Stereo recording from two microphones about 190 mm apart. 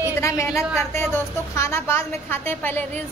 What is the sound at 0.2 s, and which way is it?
A woman's voice, 15° left (ahead or behind).